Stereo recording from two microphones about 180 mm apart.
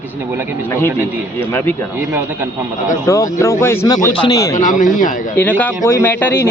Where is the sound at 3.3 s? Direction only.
15° left (ahead or behind).